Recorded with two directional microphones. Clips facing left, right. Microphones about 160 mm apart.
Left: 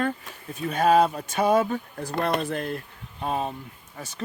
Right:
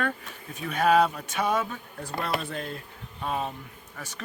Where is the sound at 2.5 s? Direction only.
55° left (ahead or behind).